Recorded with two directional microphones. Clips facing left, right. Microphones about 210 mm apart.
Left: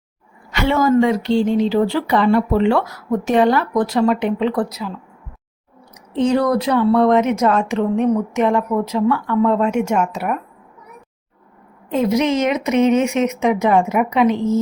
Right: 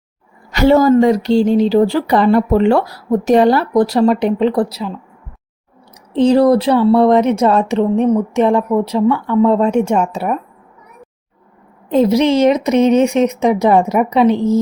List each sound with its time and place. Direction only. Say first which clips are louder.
0.5 s speech: right 6 dB; 40° right (ahead or behind)
6.1 s speech: right 6 dB; 35° right (ahead or behind)
11.9 s speech: right 5 dB; 35° right (ahead or behind)